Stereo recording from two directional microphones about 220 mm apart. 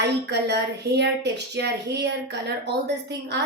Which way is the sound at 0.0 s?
50° right (ahead or behind).